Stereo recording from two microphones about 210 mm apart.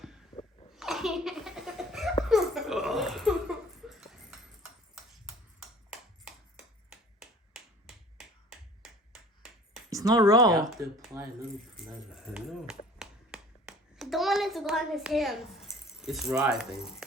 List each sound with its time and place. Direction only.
0.7 s laughter: centre (ahead or behind)
3.8 s a sound: centre (ahead or behind)
6.9 s finger snapping: centre (ahead or behind)
9.9 s speech: 15° right (ahead or behind)
11.8 s a sound: centre (ahead or behind)
16.4 s speech: 5° right (ahead or behind)